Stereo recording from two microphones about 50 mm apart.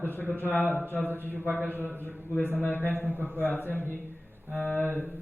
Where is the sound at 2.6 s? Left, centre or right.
Left.